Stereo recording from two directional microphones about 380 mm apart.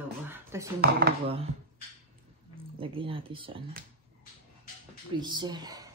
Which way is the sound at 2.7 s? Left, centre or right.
Centre.